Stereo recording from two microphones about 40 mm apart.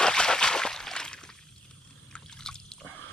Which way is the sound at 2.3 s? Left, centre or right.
Centre.